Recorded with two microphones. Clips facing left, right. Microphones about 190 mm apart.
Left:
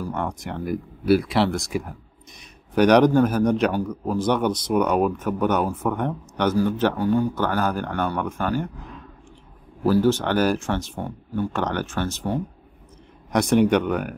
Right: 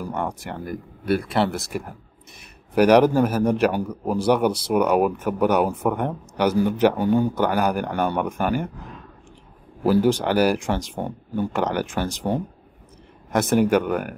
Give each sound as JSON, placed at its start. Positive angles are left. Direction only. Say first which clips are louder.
{"t": 0.0, "sound": "speech", "louder": "even", "side_deg": -5}
{"t": 0.7, "sound": "speech", "louder": "left 5 dB", "side_deg": 5}
{"t": 9.8, "sound": "speech", "louder": "right 1 dB", "side_deg": -15}
{"t": 13.3, "sound": "speech", "louder": "even", "side_deg": -5}